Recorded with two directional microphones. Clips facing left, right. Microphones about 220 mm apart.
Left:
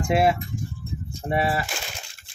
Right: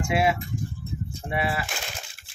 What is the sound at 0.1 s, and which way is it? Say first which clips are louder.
Speech: left 4 dB; 40° left (ahead or behind).